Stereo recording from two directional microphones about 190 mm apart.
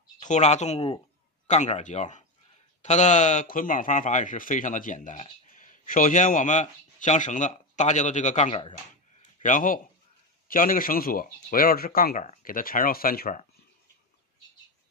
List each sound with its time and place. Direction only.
0.2 s a man's voice: 40° left (ahead or behind)